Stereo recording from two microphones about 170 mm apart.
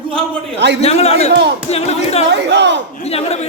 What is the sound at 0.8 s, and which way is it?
Music, 35° left (ahead or behind).